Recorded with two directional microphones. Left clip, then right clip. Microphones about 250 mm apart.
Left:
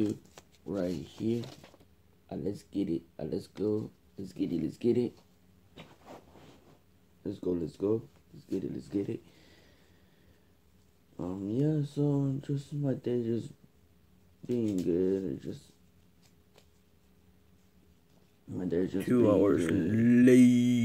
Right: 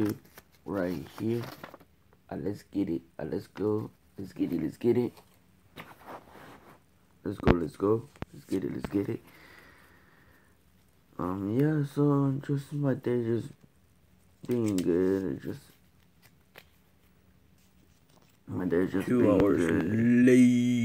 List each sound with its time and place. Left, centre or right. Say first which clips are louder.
0.1 s speech: right 1 dB; centre
1.6 s a sound: right 10 dB; centre
2.2 s speech: right 1 dB; centre
7.2 s speech: right 6 dB; centre
11.1 s speech: right 4 dB; centre
14.5 s speech: right 3 dB; centre
16.5 s a sound: right 10 dB; centre
18.5 s speech: right 3 dB; centre